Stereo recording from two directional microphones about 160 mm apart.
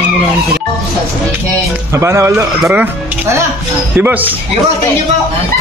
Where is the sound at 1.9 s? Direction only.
15° right (ahead or behind).